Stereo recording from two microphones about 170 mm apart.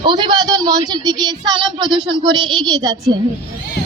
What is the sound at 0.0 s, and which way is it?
Speech, 25° right (ahead or behind).